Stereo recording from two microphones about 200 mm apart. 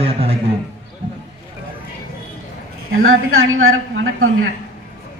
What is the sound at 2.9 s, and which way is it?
A woman's voice, 90° right.